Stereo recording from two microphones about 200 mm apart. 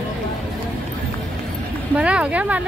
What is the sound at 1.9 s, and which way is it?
Vehicle, 5° right (ahead or behind).